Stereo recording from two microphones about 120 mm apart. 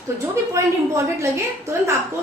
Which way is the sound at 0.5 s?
25° right (ahead or behind).